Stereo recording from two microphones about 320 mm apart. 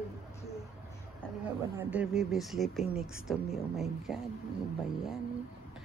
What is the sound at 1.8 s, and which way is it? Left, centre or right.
Speech, centre.